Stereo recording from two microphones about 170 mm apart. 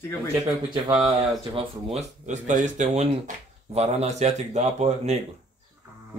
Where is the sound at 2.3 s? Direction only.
45° right (ahead or behind).